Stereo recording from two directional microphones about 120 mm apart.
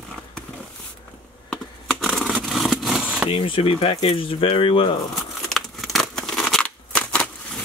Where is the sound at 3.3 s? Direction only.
45° left (ahead or behind).